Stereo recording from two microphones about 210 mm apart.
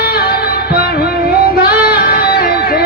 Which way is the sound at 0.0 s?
45° left (ahead or behind).